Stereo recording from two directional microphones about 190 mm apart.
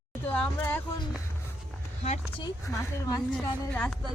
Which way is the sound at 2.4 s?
20° left (ahead or behind).